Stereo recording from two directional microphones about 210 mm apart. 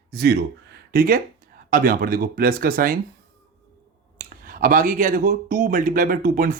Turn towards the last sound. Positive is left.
turn(degrees=-40)  # may be behind; listen again after turning